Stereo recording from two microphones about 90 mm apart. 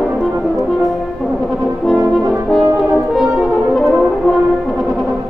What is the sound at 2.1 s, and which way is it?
French horn, 5° left (ahead or behind).